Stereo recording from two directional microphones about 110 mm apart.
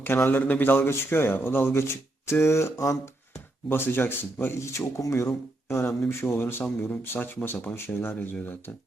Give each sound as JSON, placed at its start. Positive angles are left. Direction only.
{"t": 0.0, "sound": "speech", "side_deg": 20}
{"t": 3.7, "sound": "speech", "side_deg": 20}